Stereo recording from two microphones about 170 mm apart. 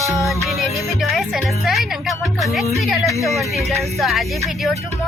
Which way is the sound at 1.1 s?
Centre (ahead or behind).